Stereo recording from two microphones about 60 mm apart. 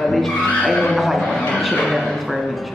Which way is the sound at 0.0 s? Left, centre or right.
Centre.